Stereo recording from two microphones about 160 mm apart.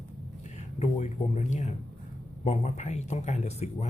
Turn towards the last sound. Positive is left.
turn(degrees=45)  # may be behind; listen again after turning